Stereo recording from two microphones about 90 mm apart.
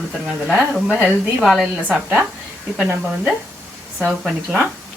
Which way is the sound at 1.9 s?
15° right (ahead or behind).